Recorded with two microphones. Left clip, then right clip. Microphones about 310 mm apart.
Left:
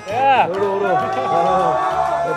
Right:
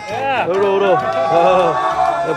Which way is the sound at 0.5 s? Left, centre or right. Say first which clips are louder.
Right 4 dB; right.